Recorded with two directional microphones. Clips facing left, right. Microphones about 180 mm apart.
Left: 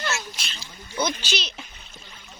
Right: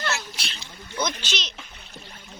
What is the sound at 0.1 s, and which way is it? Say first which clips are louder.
Splash: even; 60° right (ahead or behind).